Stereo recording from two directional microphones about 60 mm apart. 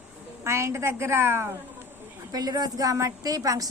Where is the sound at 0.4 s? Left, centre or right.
Right.